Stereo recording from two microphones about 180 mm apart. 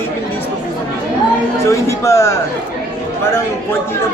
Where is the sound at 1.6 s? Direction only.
15° left (ahead or behind).